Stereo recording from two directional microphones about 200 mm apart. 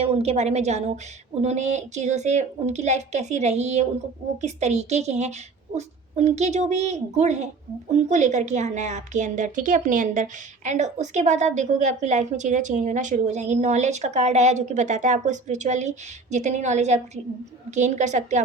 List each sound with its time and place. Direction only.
0.0 s a woman's voice: 30° right (ahead or behind)